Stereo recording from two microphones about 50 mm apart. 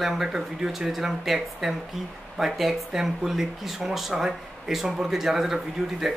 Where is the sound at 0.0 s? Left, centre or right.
Centre.